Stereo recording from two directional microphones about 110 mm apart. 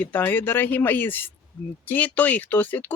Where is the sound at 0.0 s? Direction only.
20° left (ahead or behind).